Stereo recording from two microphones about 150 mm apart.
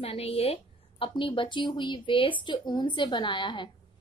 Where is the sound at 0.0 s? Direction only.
40° left (ahead or behind).